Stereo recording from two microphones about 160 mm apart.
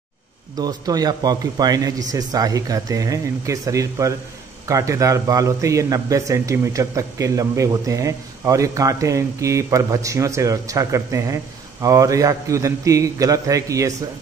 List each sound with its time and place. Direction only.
0.6 s speech: 25° right (ahead or behind)